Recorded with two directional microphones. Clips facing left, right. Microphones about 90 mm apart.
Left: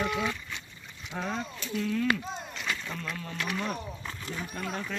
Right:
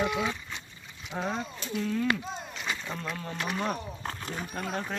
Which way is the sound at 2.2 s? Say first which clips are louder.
Even; centre (ahead or behind).